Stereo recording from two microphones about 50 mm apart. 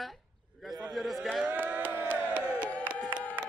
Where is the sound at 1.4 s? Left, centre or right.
Right.